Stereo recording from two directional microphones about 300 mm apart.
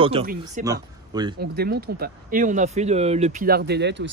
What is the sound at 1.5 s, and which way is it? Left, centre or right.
Speech, right.